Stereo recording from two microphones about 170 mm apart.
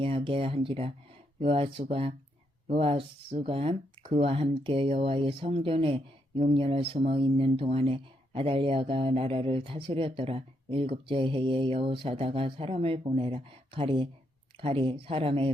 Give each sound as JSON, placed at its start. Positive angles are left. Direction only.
{"t": 0.0, "sound": "speech", "side_deg": -30}